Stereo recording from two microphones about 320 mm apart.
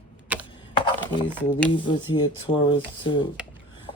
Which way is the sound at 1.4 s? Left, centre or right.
Centre.